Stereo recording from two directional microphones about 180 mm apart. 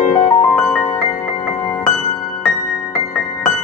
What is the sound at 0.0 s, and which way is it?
Music, 45° left (ahead or behind).